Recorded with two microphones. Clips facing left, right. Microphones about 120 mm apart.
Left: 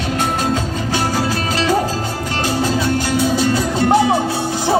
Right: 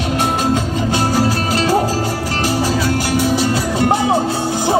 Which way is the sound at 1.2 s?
35° right (ahead or behind).